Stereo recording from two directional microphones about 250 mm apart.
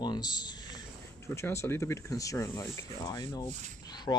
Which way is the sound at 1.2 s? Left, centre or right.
Centre.